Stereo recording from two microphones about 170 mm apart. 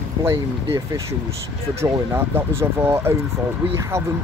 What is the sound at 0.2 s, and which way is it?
Speech, 15° right (ahead or behind).